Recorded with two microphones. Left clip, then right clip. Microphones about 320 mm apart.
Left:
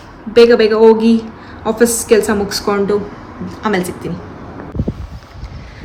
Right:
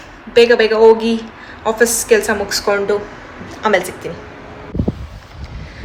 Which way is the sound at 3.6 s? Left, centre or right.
Centre.